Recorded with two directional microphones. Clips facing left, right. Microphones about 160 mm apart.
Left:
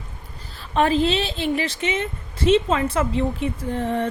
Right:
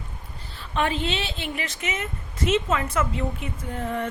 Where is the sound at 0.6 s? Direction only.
35° left (ahead or behind).